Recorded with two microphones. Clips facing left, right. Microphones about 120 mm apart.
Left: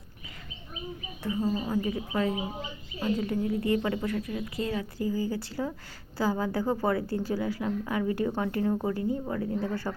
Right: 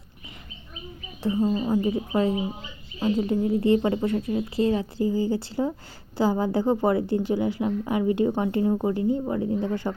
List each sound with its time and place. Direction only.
1.2 s a woman's voice: 25° right (ahead or behind)